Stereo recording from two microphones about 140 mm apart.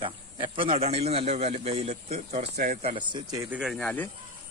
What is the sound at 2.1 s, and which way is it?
Speech, 75° right (ahead or behind).